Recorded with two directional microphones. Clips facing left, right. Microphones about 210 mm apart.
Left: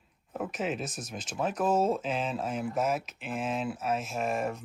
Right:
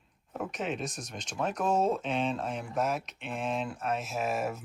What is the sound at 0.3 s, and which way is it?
Speech, centre (ahead or behind).